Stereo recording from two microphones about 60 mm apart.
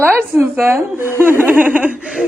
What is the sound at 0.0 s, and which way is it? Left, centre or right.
Speech, right.